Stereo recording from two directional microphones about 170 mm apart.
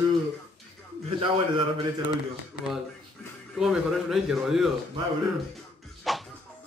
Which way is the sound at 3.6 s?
Centre (ahead or behind).